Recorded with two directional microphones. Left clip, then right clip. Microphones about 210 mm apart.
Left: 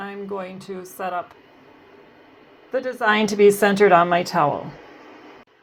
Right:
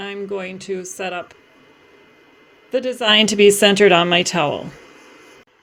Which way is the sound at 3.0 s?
90° right.